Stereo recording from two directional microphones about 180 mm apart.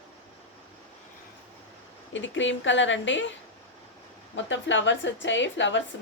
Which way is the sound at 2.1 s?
90° left.